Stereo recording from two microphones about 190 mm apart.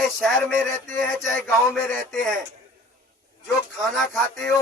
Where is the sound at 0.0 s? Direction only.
Centre (ahead or behind).